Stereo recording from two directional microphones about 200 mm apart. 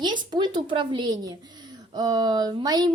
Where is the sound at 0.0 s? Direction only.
20° right (ahead or behind).